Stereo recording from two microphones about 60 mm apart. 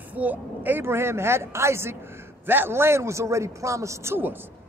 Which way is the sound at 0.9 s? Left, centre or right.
Right.